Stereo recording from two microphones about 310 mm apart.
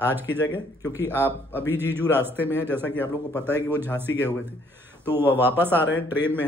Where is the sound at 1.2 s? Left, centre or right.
Centre.